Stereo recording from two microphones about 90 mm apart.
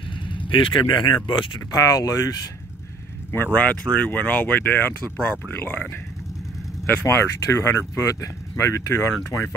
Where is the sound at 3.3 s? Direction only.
20° left (ahead or behind).